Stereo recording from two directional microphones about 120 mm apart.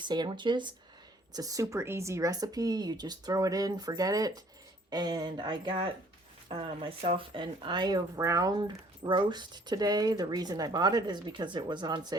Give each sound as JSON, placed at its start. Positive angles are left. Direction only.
{"t": 0.0, "sound": "speech", "side_deg": -40}
{"t": 1.3, "sound": "speech", "side_deg": -30}